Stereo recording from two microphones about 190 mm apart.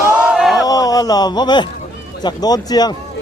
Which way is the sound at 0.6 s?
20° left (ahead or behind).